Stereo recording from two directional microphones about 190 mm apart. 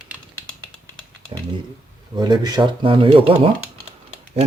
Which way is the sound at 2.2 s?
20° right (ahead or behind).